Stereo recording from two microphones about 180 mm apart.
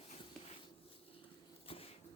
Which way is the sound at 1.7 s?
30° left (ahead or behind).